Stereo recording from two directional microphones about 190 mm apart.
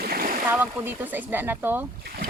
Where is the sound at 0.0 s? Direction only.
55° right (ahead or behind).